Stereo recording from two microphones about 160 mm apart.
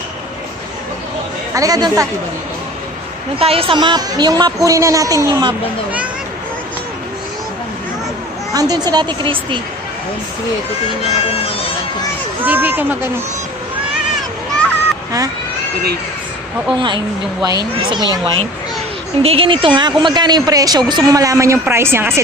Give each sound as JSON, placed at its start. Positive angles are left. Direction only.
{"t": 1.5, "sound": "speech", "side_deg": -20}
{"t": 3.3, "sound": "speech", "side_deg": -35}
{"t": 8.5, "sound": "speech", "side_deg": -25}
{"t": 11.0, "sound": "speech", "side_deg": 35}
{"t": 12.4, "sound": "speech", "side_deg": -10}
{"t": 16.7, "sound": "speech", "side_deg": -30}